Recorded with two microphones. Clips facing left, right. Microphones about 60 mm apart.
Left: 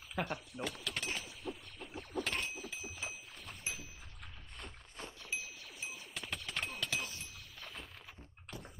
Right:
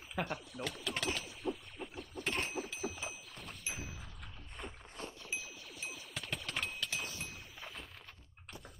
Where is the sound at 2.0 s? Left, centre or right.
Left.